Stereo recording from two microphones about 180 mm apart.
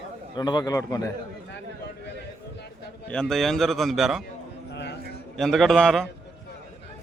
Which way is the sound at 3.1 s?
5° left (ahead or behind).